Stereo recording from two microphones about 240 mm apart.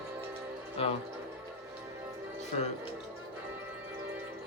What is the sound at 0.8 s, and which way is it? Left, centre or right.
Speech, left.